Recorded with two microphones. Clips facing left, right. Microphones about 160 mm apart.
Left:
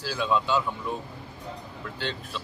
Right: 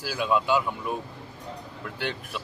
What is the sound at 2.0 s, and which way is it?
Speech, 10° right (ahead or behind).